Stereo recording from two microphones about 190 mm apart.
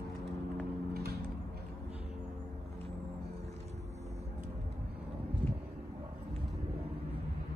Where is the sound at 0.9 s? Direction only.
55° right (ahead or behind).